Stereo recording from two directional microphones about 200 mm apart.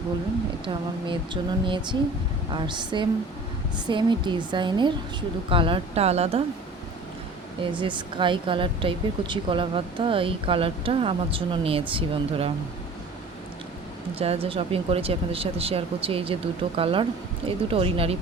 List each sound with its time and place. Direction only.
0.6 s speech: 25° right (ahead or behind)
7.6 s speech: 25° right (ahead or behind)
14.2 s speech: 30° right (ahead or behind)